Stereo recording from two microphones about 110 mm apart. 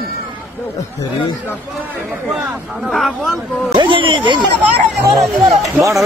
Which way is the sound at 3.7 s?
50° right (ahead or behind).